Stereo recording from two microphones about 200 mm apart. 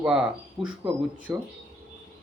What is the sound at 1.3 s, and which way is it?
Speech, 15° right (ahead or behind).